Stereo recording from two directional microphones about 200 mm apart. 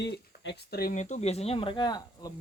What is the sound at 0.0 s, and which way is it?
Speech, 60° left (ahead or behind).